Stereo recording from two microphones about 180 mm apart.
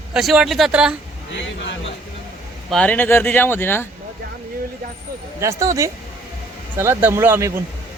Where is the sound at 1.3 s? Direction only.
90° left.